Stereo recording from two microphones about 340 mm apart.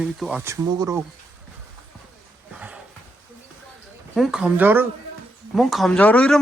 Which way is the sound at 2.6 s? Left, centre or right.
Centre.